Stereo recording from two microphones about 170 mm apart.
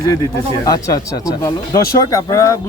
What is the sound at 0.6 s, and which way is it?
Speech, 20° left (ahead or behind).